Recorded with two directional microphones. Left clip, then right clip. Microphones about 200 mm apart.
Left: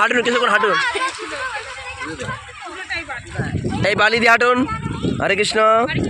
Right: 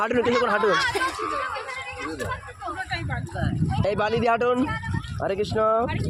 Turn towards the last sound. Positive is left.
turn(degrees=20)  # may be behind; listen again after turning